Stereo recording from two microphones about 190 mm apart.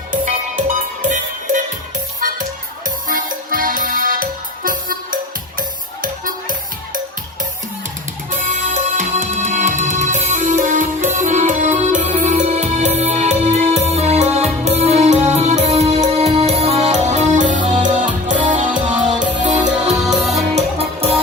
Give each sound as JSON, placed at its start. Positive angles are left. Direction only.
{"t": 0.1, "sound": "music", "side_deg": -45}
{"t": 2.8, "sound": "music", "side_deg": -45}
{"t": 8.4, "sound": "music", "side_deg": -40}
{"t": 20.1, "sound": "music", "side_deg": 0}
{"t": 20.6, "sound": "music", "side_deg": -30}